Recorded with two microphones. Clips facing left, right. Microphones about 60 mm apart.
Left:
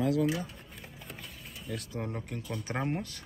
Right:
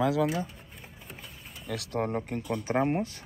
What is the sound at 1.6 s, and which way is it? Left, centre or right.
Speech, right.